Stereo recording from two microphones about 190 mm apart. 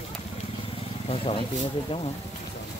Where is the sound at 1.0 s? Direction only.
30° left (ahead or behind).